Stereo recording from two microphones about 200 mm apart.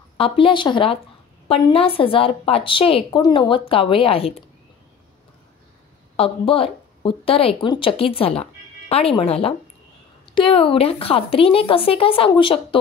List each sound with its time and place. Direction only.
0.2 s a woman's voice: 25° left (ahead or behind)
6.1 s a woman's voice: 30° left (ahead or behind)